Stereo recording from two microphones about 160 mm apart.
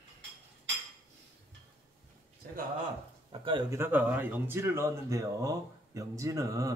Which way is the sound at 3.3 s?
35° right (ahead or behind).